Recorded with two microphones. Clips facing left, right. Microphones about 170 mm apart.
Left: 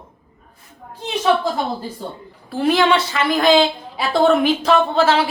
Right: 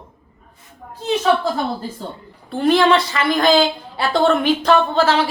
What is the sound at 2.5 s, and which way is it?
A woman's voice, 5° left (ahead or behind).